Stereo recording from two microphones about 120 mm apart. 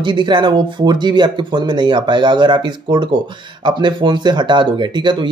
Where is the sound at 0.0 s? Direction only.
40° right (ahead or behind).